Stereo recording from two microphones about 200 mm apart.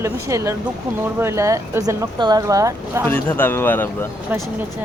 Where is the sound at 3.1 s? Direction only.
10° left (ahead or behind).